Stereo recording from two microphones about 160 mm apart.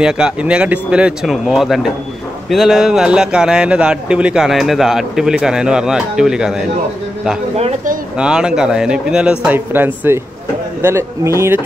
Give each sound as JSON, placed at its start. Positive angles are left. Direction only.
{"t": 0.0, "sound": "a man's voice", "side_deg": -5}
{"t": 8.2, "sound": "a man's voice", "side_deg": -5}